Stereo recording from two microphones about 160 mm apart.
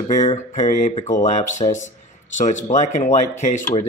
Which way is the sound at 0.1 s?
45° left (ahead or behind).